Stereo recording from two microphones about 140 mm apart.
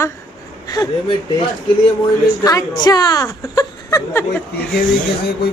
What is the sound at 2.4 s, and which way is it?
Speech, 25° left (ahead or behind).